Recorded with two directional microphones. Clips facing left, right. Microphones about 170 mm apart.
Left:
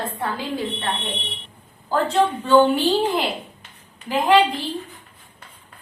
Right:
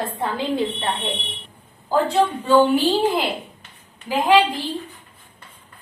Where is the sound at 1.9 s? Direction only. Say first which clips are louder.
Right 1 dB; 5° right (ahead or behind).